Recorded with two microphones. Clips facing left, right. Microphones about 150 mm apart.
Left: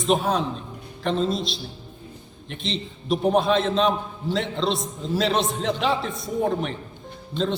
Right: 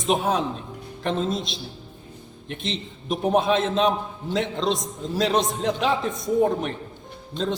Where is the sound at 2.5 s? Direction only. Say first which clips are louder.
Left 1 dB; 50° right (ahead or behind).